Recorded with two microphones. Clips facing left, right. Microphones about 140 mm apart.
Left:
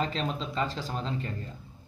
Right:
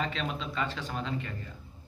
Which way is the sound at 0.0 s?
35° left (ahead or behind).